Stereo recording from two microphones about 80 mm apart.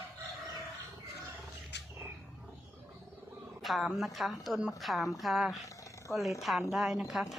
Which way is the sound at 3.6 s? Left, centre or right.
Centre.